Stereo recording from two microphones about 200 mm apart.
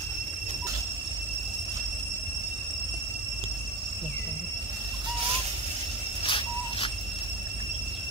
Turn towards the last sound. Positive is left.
turn(degrees=25)  # may be behind; listen again after turning